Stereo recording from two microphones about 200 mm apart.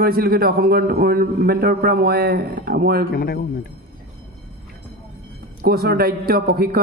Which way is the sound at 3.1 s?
50° left (ahead or behind).